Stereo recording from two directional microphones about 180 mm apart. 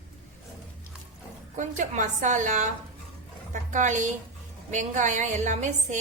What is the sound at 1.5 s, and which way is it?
A woman's voice, 45° right (ahead or behind).